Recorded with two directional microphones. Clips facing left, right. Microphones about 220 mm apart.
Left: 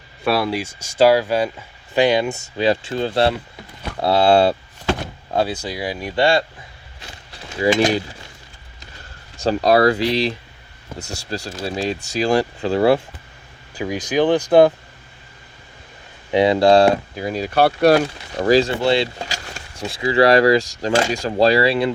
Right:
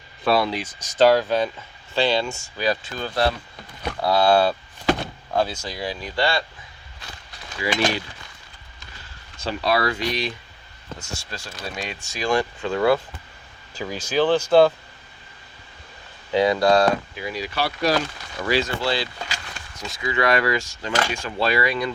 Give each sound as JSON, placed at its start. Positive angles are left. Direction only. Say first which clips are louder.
{"t": 0.3, "sound": "speech", "louder": "left 1 dB", "side_deg": 5}
{"t": 9.4, "sound": "speech", "louder": "left 8 dB", "side_deg": 45}
{"t": 13.7, "sound": "speech", "louder": "left 3 dB", "side_deg": 15}
{"t": 16.3, "sound": "speech", "louder": "left 4 dB", "side_deg": 25}
{"t": 18.3, "sound": "speech", "louder": "left 8 dB", "side_deg": 35}
{"t": 18.8, "sound": "speech", "louder": "left 7 dB", "side_deg": 25}